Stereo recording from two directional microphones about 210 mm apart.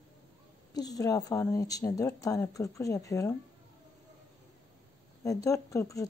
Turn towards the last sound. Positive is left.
turn(degrees=15)  # may be behind; listen again after turning